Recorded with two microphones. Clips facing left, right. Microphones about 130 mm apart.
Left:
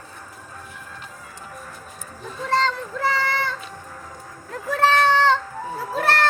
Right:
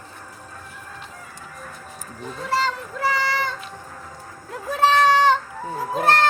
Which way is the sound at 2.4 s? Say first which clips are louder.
Left 2 dB; 10° right (ahead or behind).